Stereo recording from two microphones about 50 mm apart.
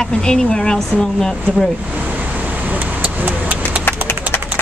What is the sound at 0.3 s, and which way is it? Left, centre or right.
Speech, centre.